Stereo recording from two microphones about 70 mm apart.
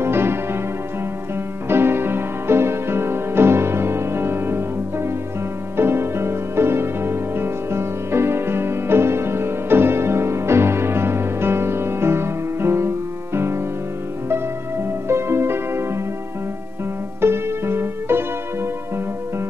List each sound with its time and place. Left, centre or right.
0.0 s music: right
1.7 s music: right
15.0 s music: right
17.2 s music: right